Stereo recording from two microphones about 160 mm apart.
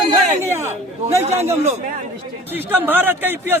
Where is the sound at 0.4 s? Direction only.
15° right (ahead or behind).